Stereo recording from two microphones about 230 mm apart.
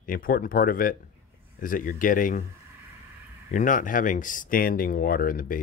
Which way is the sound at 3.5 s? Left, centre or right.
Left.